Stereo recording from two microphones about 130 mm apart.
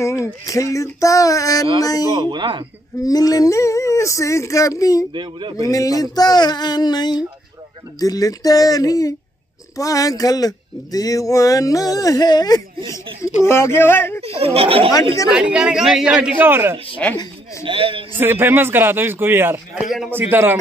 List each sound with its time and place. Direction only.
0.0 s speech: 25° left (ahead or behind)
2.2 s speech: 35° right (ahead or behind)
3.0 s speech: 30° left (ahead or behind)
5.1 s speech: 35° right (ahead or behind)
5.7 s speech: 25° left (ahead or behind)
13.5 s speech: 20° left (ahead or behind)
14.2 s speech: 50° right (ahead or behind)
15.3 s a man's voice: 5° right (ahead or behind)
17.0 s speech: 10° left (ahead or behind)
17.6 s speech: 40° right (ahead or behind)
18.1 s a man's voice: 15° right (ahead or behind)
19.7 s a man's voice: centre (ahead or behind)
20.1 s a man's voice: 15° right (ahead or behind)